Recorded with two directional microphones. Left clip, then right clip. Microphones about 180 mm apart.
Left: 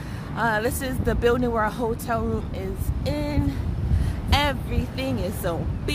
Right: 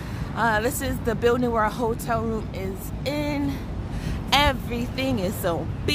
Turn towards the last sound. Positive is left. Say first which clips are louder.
# right 2 dB
turn(degrees=-15)  # may be behind; listen again after turning